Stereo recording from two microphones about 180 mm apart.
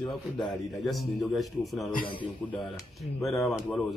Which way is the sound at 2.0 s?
25° left (ahead or behind).